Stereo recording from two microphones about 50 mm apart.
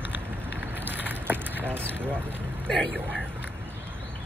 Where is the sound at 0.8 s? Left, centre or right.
Right.